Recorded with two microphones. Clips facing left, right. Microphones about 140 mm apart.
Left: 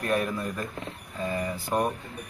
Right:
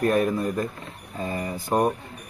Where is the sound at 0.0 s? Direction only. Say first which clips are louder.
Right 6 dB; 40° right (ahead or behind).